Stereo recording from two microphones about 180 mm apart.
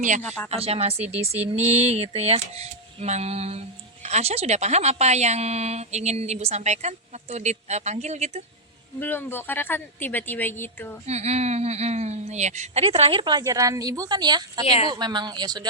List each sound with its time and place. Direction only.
0.2 s a woman's voice: 5° left (ahead or behind)
0.5 s a woman's voice: 35° right (ahead or behind)
9.0 s a woman's voice: 10° left (ahead or behind)
11.0 s a woman's voice: 35° right (ahead or behind)